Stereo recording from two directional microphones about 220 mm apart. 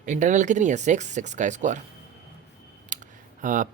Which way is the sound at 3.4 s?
35° right (ahead or behind).